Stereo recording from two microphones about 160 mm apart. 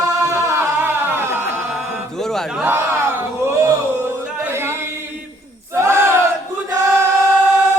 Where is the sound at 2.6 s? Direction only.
10° right (ahead or behind).